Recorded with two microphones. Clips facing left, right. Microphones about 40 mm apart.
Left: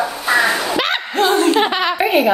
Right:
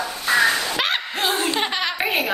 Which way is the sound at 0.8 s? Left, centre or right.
Centre.